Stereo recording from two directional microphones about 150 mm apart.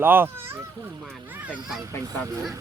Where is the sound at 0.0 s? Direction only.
15° right (ahead or behind).